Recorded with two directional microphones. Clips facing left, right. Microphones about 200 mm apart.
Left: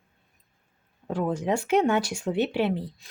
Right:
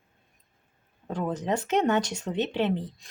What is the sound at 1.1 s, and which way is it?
Speech, 10° left (ahead or behind).